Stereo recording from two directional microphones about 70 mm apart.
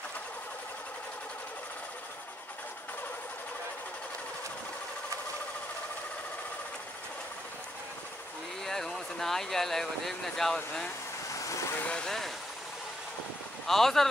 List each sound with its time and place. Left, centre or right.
8.6 s speech: centre
11.3 s vehicle: left
11.8 s speech: centre
13.7 s speech: centre